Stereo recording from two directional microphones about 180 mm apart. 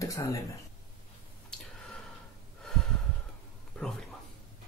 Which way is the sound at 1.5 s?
5° left (ahead or behind).